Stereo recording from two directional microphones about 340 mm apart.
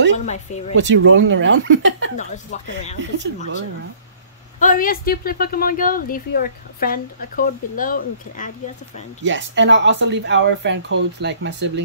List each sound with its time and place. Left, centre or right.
0.2 s speech: centre
0.7 s speech: right
2.1 s speech: left
4.6 s speech: left
9.2 s speech: right